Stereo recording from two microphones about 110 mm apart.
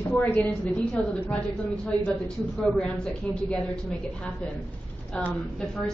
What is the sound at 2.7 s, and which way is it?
Speech, 10° left (ahead or behind).